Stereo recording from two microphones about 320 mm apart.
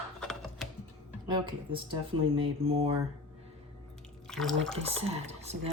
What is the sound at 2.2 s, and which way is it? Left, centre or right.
Speech, centre.